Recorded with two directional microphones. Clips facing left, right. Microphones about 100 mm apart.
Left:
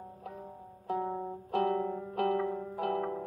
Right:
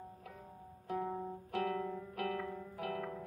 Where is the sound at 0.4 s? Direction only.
35° left (ahead or behind).